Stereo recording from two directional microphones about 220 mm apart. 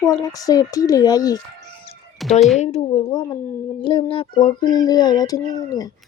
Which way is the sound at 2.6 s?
30° left (ahead or behind).